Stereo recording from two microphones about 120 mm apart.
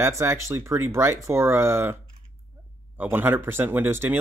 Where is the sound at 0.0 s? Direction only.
20° right (ahead or behind).